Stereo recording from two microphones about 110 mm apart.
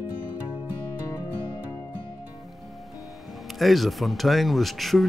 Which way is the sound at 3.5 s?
Centre (ahead or behind).